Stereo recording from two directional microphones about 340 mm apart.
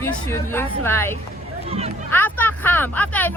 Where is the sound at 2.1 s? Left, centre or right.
Centre.